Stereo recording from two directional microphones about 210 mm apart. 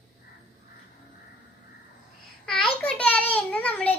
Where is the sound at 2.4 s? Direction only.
5° left (ahead or behind).